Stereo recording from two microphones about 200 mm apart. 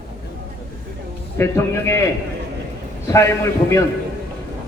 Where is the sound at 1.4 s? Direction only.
15° left (ahead or behind).